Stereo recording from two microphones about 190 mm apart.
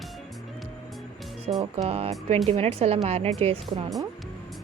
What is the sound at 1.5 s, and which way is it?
Speech, 30° right (ahead or behind).